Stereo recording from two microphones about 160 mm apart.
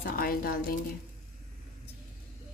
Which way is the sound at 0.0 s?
70° left (ahead or behind).